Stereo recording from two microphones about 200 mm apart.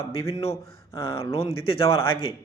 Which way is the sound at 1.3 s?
30° left (ahead or behind).